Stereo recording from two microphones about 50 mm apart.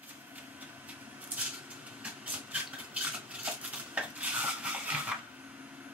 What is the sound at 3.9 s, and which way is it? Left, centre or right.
Dishes, right.